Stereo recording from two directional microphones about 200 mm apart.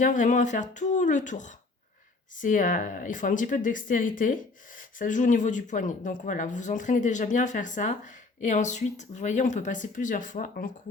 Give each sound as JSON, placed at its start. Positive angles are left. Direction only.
{"t": 0.0, "sound": "speech", "side_deg": 40}